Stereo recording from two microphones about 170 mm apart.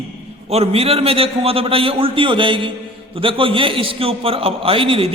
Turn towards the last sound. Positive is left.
turn(degrees=-35)  # may be behind; listen again after turning